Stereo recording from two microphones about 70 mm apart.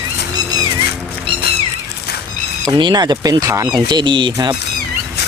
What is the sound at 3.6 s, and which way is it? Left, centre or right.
Speech, right.